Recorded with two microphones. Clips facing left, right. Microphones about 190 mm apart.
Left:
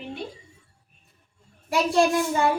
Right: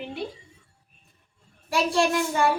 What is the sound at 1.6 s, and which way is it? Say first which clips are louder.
Child singing: left 2 dB; 20° left (ahead or behind).